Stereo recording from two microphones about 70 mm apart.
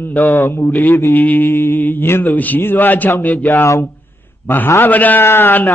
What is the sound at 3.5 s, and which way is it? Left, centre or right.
Mantra, left.